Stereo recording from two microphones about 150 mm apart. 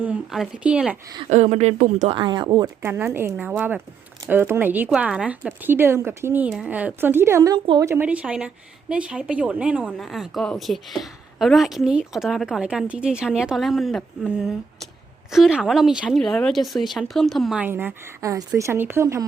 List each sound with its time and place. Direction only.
0.0 s speech: 5° right (ahead or behind)
1.3 s speech: 50° right (ahead or behind)
2.1 s speech: 30° right (ahead or behind)
2.8 s speech: 15° right (ahead or behind); by 17.6 s centre (ahead or behind)
17.6 s speech: 15° right (ahead or behind)